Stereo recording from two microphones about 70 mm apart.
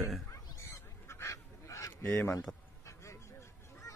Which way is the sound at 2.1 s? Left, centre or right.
Left.